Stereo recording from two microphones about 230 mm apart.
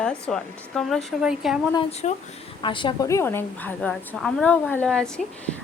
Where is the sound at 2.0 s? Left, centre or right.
Left.